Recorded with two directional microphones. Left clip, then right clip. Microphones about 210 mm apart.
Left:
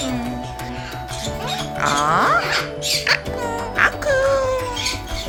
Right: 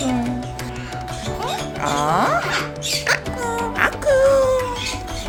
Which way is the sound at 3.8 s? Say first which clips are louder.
Right 1 dB; 10° right (ahead or behind).